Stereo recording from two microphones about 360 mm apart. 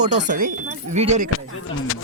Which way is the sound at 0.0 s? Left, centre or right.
Centre.